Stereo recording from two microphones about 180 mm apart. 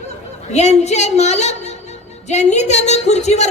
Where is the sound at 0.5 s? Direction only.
40° left (ahead or behind).